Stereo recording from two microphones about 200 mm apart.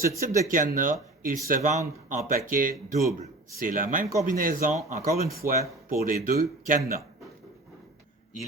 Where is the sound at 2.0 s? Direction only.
45° right (ahead or behind).